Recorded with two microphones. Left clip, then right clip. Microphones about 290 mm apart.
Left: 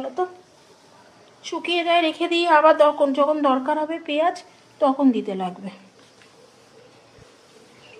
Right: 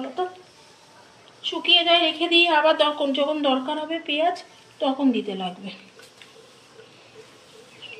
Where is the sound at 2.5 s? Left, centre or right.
Left.